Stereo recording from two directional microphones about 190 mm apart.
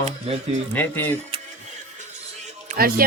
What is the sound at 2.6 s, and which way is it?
Music, 50° right (ahead or behind).